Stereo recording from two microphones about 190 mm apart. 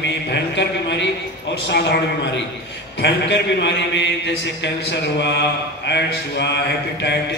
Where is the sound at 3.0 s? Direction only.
65° left (ahead or behind).